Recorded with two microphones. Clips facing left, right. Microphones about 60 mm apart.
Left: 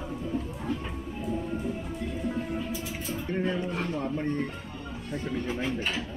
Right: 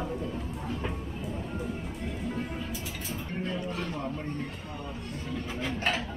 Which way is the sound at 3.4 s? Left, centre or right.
Left.